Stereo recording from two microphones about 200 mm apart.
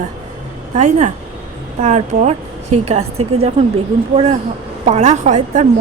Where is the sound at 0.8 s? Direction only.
35° right (ahead or behind).